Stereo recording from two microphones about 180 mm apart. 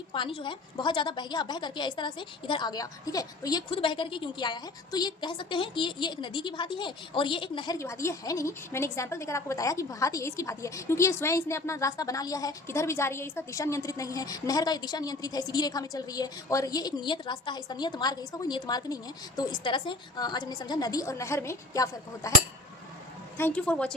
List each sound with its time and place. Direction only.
0.1 s a woman's voice: 30° left (ahead or behind)
23.4 s a woman's voice: 5° left (ahead or behind)